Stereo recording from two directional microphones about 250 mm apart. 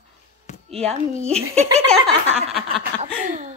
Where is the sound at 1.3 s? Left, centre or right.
Right.